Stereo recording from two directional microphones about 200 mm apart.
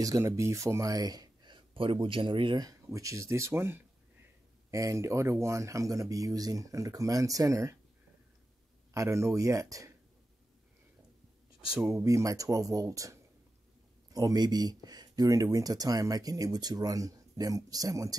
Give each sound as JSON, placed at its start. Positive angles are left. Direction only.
{"t": 0.0, "sound": "speech", "side_deg": -15}
{"t": 8.9, "sound": "speech", "side_deg": -15}
{"t": 11.7, "sound": "speech", "side_deg": -5}
{"t": 12.0, "sound": "speech", "side_deg": -15}